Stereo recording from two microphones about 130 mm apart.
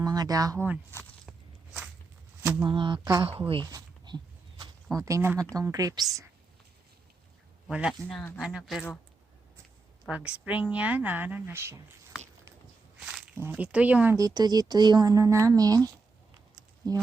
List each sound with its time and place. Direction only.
0.0 s speech: 30° right (ahead or behind)
2.6 s speech: 40° right (ahead or behind)
3.2 s a woman's voice: 45° right (ahead or behind)
3.7 s a sound: 30° right (ahead or behind)
5.5 s speech: 25° right (ahead or behind)
7.7 s speech: 10° right (ahead or behind)
8.0 s speech: 10° left (ahead or behind)
8.4 s speech: 5° right (ahead or behind)
10.1 s speech: 10° right (ahead or behind)
13.3 s speech: 15° right (ahead or behind)
14.2 s speech: 30° right (ahead or behind)